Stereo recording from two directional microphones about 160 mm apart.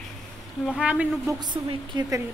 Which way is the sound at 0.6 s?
5° right (ahead or behind).